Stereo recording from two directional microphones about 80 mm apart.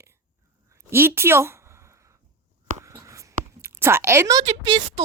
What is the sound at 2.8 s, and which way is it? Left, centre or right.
Writing, right.